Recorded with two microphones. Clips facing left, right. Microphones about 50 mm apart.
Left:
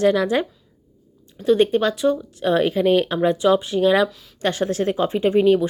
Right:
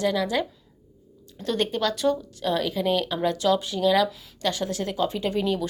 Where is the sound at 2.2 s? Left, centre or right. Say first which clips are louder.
Left 7 dB; left.